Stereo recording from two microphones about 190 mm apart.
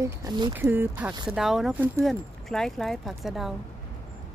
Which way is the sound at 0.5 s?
10° right (ahead or behind).